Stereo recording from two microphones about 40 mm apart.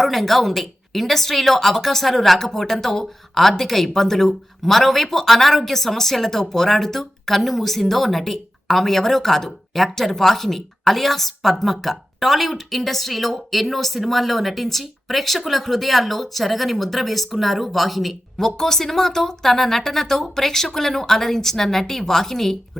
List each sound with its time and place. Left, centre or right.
0.0 s speech: centre